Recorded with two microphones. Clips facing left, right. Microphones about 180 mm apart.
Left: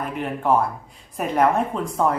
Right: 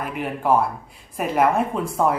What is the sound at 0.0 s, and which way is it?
Speech, 5° right (ahead or behind).